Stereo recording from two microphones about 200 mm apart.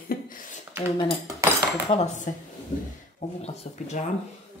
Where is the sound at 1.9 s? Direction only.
35° left (ahead or behind).